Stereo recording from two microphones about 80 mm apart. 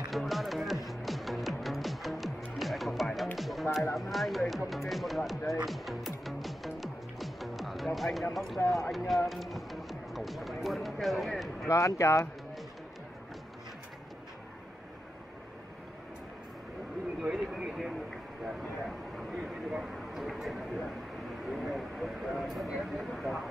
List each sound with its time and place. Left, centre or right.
0.1 s music: centre
3.9 s speech: centre
5.7 s music: centre
8.6 s speech: centre
11.7 s speech: left
17.2 s a sound: centre
21.5 s vehicle: centre
22.7 s a sound: centre